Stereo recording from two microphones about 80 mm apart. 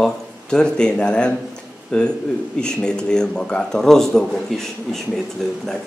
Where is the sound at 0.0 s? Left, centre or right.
Centre.